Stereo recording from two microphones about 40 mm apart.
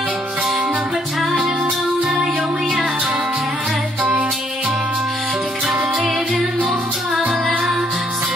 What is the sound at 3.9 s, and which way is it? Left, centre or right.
Music, right.